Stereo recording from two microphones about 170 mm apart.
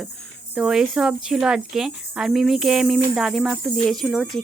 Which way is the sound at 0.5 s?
5° right (ahead or behind).